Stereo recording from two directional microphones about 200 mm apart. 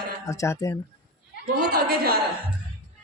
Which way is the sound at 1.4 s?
50° right (ahead or behind).